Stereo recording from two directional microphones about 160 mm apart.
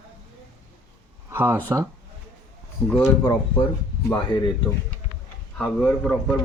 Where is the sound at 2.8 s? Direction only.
5° left (ahead or behind).